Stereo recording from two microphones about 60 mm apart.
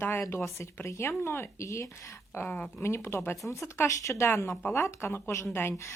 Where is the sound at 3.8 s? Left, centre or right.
Left.